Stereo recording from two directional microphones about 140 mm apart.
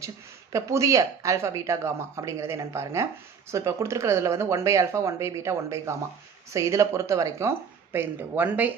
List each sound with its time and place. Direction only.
0.5 s speech: 20° right (ahead or behind)